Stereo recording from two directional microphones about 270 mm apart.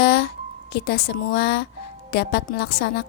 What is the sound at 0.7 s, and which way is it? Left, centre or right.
Speech, left.